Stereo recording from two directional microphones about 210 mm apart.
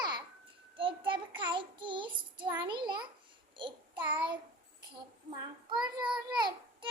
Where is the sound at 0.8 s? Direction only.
25° right (ahead or behind).